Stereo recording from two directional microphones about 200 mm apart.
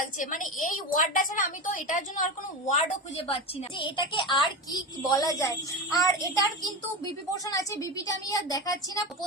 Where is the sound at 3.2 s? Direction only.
25° left (ahead or behind).